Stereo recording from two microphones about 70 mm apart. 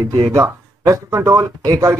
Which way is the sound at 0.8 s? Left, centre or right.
Right.